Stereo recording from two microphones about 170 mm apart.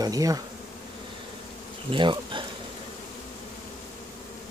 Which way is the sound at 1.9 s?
30° right (ahead or behind).